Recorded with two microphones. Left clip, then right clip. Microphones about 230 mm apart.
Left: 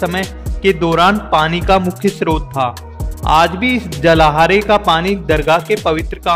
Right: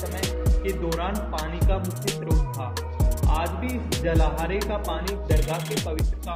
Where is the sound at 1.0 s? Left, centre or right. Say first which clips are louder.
Left 18 dB; left.